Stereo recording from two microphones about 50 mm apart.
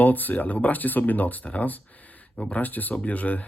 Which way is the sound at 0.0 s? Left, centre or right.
Left.